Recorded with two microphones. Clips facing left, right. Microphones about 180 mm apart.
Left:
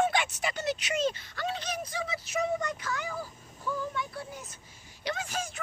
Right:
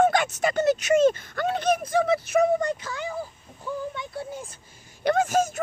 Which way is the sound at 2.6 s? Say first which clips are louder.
Right 6 dB; 30° right (ahead or behind).